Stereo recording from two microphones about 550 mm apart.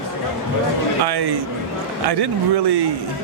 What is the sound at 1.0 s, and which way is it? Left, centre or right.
Speech, right.